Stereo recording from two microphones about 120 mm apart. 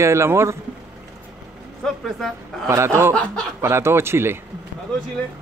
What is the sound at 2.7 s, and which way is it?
Speech, 25° right (ahead or behind).